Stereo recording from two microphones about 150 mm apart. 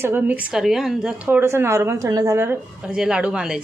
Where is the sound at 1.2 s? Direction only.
15° right (ahead or behind).